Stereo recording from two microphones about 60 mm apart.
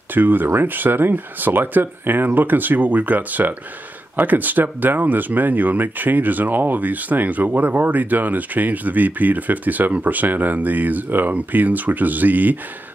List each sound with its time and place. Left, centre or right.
0.1 s speech: right